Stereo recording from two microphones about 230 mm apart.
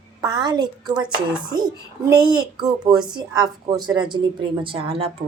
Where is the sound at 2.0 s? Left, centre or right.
Centre.